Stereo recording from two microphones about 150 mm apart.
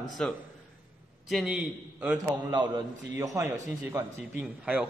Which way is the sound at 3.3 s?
15° right (ahead or behind).